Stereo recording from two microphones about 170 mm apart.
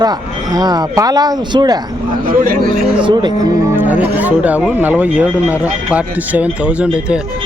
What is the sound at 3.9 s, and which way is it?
Speech, 10° right (ahead or behind).